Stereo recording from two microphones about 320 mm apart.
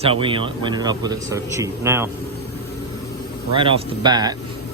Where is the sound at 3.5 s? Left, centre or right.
Centre.